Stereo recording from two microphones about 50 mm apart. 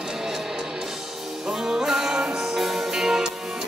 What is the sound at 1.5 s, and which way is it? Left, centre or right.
Music, centre.